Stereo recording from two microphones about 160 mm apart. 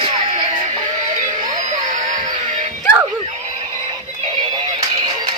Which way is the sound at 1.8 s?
50° right (ahead or behind).